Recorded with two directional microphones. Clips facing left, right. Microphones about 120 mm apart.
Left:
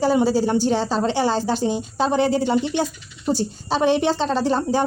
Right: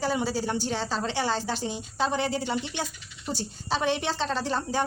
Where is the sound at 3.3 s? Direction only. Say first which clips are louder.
Left 8 dB; 25° left (ahead or behind).